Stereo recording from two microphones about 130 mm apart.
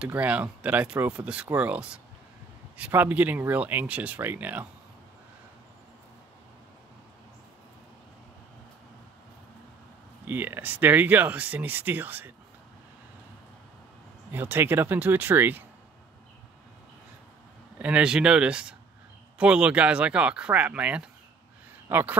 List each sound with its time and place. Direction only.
0.0 s speech: 10° right (ahead or behind)
10.2 s speech: 15° right (ahead or behind)
14.3 s speech: 15° right (ahead or behind)
17.7 s speech: 10° right (ahead or behind)